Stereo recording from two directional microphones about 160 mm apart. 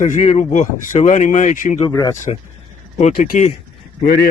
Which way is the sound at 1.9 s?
20° left (ahead or behind).